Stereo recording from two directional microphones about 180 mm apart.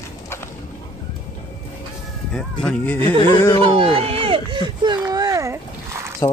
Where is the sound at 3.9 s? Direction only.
30° right (ahead or behind); by 6.0 s 15° right (ahead or behind).